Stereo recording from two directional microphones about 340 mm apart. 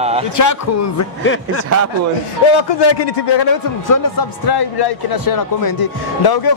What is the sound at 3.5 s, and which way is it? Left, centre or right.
Speech, left.